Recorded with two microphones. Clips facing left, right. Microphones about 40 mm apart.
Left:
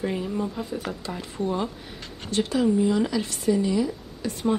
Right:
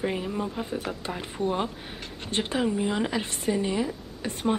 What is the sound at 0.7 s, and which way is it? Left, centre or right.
Speech, right.